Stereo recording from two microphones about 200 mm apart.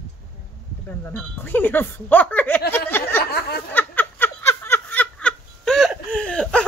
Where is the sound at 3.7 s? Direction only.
10° left (ahead or behind).